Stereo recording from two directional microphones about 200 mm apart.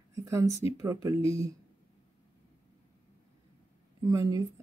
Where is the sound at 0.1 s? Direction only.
15° right (ahead or behind).